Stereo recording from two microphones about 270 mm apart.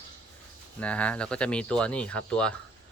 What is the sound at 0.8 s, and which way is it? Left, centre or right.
Speech, centre.